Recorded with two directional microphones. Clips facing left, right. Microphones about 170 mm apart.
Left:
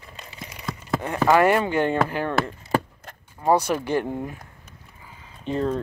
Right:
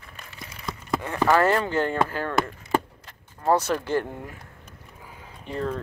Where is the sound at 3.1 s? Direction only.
50° left (ahead or behind).